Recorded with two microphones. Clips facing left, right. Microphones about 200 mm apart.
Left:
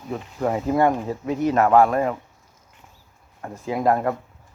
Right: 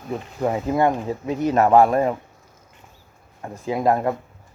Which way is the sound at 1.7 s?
35° right (ahead or behind).